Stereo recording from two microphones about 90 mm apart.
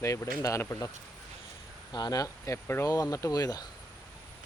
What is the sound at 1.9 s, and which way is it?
Speech, 50° left (ahead or behind).